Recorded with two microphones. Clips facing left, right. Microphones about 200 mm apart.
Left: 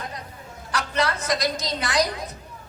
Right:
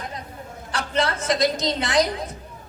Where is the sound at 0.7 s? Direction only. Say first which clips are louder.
Right 1 dB; 25° right (ahead or behind).